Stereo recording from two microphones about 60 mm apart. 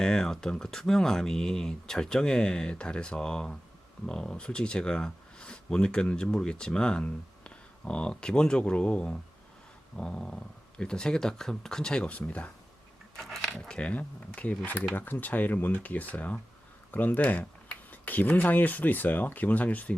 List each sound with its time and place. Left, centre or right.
0.0 s speech: centre
13.1 s speech: centre
13.5 s speech: centre